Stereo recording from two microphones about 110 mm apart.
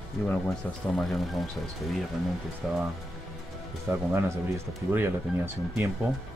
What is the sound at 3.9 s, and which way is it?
Speech, 25° right (ahead or behind).